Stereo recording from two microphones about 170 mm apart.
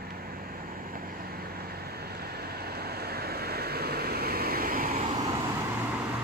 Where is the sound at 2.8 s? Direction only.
65° right (ahead or behind).